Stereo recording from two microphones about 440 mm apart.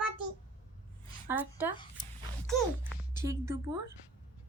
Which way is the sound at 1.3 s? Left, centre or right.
Centre.